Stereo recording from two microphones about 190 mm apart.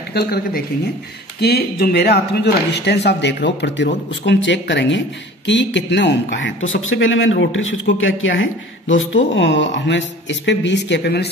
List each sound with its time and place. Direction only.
0.1 s speech: 55° left (ahead or behind)